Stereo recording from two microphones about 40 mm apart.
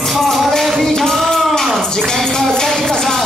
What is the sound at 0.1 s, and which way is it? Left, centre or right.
Music, centre.